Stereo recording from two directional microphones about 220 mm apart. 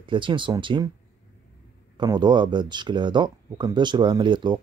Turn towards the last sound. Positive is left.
turn(degrees=-20)  # may be behind; listen again after turning